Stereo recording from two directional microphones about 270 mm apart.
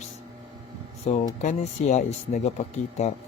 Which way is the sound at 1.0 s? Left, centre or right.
Left.